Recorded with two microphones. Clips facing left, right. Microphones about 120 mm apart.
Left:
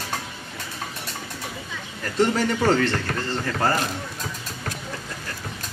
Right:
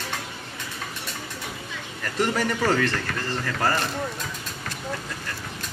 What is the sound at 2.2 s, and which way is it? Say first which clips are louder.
Speech: left 3 dB; 30° left (ahead or behind).